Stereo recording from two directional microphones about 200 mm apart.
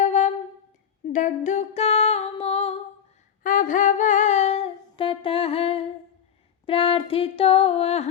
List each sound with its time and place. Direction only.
0.0 s a sound: 35° left (ahead or behind)
1.1 s music: 40° left (ahead or behind)
3.4 s humming: 40° left (ahead or behind)
6.7 s music: 25° left (ahead or behind)